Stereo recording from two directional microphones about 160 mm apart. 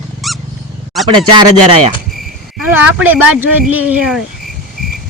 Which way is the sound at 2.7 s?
10° right (ahead or behind).